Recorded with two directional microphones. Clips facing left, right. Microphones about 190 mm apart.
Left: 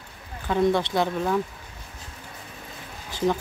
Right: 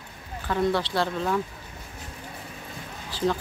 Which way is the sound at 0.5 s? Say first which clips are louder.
Left 3 dB; 20° left (ahead or behind).